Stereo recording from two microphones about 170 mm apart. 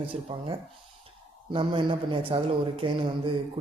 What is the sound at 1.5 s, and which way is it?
A man's voice, 30° right (ahead or behind).